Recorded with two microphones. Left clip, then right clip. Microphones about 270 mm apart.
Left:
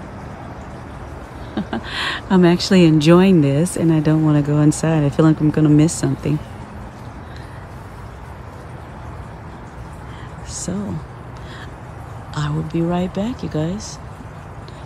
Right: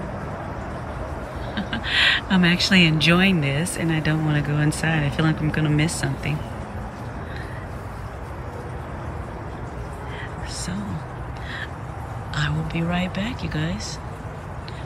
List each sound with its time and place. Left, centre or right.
1.7 s speech: centre
12.4 s speech: centre